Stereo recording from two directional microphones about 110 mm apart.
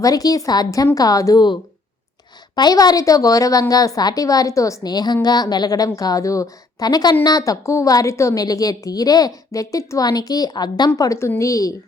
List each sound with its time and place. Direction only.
0.0 s a woman's voice: 35° left (ahead or behind)
2.6 s a woman's voice: 35° left (ahead or behind)